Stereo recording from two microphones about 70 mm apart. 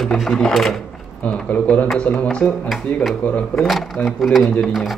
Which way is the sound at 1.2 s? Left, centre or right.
Left.